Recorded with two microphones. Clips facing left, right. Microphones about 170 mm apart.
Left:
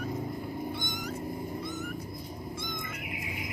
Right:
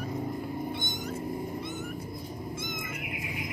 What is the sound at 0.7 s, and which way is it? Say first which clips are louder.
Cat: right 1 dB; 25° right (ahead or behind).